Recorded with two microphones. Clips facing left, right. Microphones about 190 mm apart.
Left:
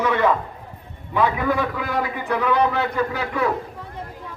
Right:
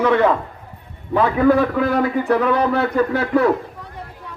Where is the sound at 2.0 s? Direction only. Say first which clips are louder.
Right 6 dB; 45° right (ahead or behind).